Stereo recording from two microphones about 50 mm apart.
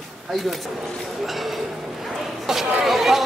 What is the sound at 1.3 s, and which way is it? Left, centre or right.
Speech, centre.